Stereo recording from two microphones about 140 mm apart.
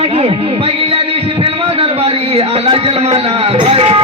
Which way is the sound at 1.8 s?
45° right (ahead or behind).